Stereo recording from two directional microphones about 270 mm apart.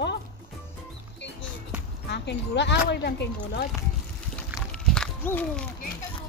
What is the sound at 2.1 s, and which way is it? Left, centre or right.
Speech, left.